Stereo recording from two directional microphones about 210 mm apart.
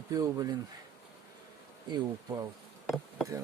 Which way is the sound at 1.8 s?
20° right (ahead or behind).